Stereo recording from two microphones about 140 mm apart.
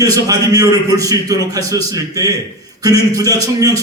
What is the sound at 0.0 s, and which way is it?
A man's voice, 25° right (ahead or behind).